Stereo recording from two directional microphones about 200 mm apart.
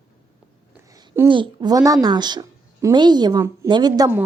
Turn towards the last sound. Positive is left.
turn(degrees=-20)  # may be behind; listen again after turning